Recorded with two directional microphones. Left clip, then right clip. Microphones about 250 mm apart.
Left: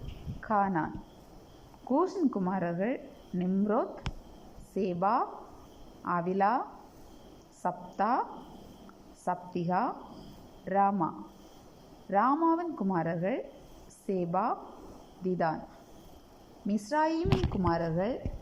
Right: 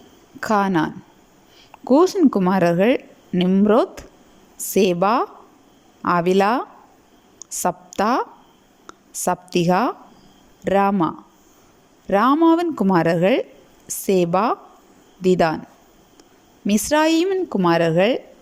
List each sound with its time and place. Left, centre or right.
0.3 s a woman's voice: right
1.9 s a woman's voice: right
16.6 s a woman's voice: right